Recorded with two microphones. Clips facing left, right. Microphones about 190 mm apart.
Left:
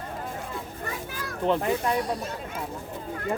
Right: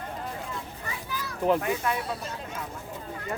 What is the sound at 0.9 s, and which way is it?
Children playing, 50° left (ahead or behind).